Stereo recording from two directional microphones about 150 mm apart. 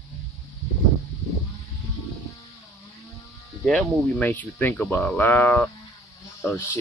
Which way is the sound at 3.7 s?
5° left (ahead or behind).